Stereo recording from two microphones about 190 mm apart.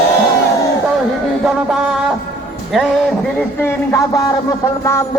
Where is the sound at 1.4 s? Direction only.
Centre (ahead or behind).